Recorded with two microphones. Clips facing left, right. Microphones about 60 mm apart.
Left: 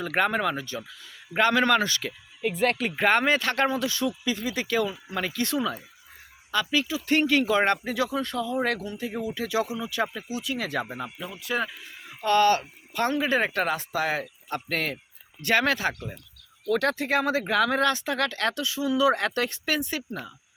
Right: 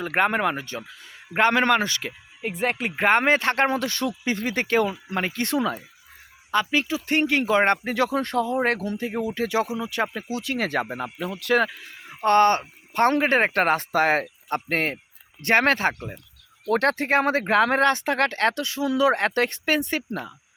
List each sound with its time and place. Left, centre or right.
0.0 s speech: right
3.7 s speech: right
10.2 s speech: right
11.3 s speech: right
12.2 s speech: right
14.7 s speech: right
16.6 s speech: right